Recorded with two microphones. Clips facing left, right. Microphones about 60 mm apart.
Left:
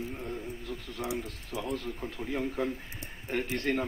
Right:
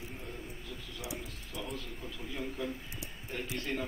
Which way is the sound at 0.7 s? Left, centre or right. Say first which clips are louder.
Left 8 dB; left.